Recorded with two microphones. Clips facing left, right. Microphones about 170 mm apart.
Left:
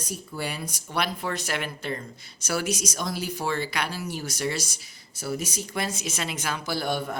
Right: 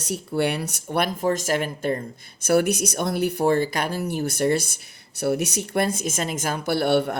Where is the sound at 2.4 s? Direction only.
55° right (ahead or behind).